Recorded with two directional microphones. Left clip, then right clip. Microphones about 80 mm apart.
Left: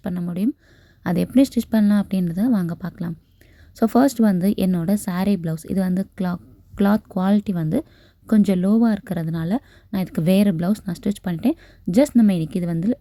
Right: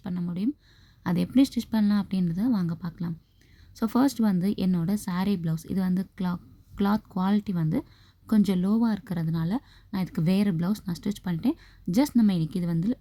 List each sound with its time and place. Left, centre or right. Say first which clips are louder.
0.0 s a sound: left 6 dB; left
1.0 s a woman's voice: left 6 dB; left
8.3 s speech: left 7 dB; left